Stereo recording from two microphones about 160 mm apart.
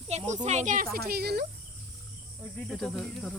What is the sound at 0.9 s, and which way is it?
Speech, 75° right (ahead or behind).